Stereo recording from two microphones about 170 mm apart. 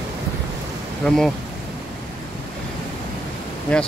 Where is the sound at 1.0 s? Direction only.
5° left (ahead or behind).